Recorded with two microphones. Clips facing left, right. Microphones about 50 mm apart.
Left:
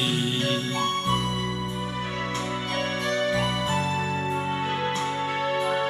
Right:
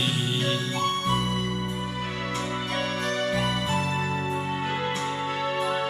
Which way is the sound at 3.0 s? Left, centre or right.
Left.